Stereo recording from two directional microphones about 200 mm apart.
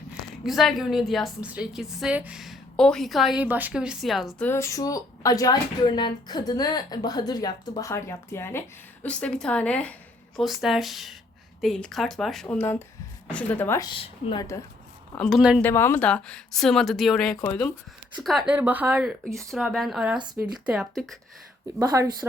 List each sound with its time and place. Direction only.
0.4 s a woman's voice: centre (ahead or behind); by 14.4 s 25° left (ahead or behind)
15.1 s a woman's voice: 5° left (ahead or behind)
15.6 s a woman's voice: 10° left (ahead or behind)
18.2 s a woman's voice: centre (ahead or behind)
21.8 s speech: 15° right (ahead or behind)